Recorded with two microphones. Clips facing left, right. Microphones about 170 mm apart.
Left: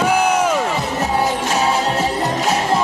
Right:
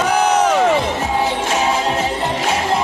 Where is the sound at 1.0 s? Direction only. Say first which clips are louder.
Even; 40° left (ahead or behind).